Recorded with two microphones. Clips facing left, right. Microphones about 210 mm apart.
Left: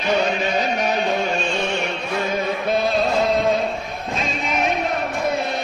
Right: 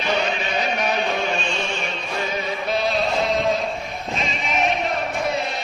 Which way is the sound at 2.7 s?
50° left (ahead or behind).